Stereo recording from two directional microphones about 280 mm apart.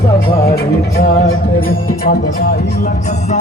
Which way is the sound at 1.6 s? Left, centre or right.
Left.